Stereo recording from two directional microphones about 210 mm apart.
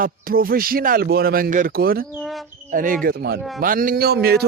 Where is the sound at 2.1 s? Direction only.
Centre (ahead or behind).